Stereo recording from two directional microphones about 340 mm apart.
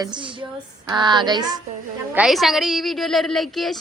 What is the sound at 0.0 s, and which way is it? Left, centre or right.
Speech, centre.